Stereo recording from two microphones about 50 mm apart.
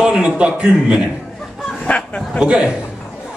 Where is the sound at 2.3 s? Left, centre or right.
Centre.